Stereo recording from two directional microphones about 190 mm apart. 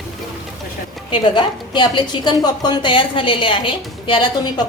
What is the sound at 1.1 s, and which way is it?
A woman's voice, 25° left (ahead or behind).